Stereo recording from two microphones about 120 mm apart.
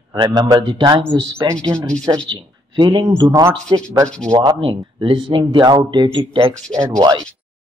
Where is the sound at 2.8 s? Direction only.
35° right (ahead or behind).